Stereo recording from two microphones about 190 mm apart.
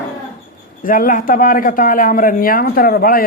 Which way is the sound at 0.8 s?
45° left (ahead or behind).